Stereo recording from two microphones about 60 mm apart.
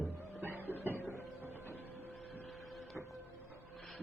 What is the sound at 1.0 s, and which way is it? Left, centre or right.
Printer, right.